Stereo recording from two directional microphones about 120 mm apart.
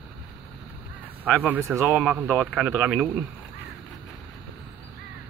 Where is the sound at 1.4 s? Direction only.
15° right (ahead or behind).